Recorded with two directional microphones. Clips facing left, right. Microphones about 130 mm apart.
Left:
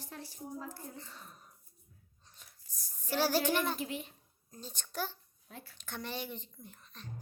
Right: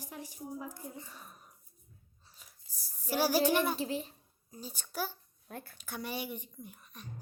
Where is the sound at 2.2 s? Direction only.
5° right (ahead or behind).